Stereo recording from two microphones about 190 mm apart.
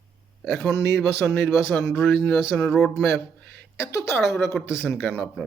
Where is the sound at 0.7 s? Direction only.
65° right (ahead or behind).